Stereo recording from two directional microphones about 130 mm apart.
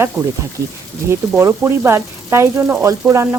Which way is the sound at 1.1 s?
20° right (ahead or behind).